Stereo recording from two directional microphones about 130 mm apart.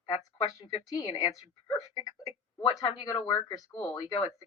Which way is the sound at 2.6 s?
40° left (ahead or behind).